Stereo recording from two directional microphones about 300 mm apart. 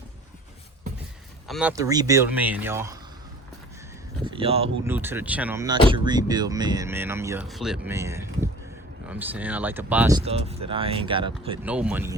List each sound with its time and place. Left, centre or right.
1.5 s speech: centre
4.2 s a sound: centre
4.9 s speech: centre
11.6 s speech: centre